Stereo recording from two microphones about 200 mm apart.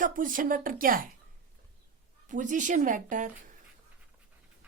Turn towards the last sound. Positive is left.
turn(degrees=-40)  # may be behind; listen again after turning